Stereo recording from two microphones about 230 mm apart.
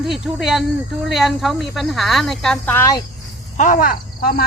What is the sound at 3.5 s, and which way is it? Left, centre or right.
Speech, left.